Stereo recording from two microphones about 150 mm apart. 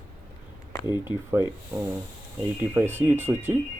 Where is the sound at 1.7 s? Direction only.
10° right (ahead or behind).